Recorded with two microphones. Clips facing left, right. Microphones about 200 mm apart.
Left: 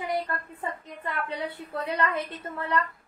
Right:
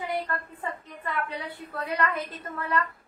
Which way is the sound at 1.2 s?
25° left (ahead or behind).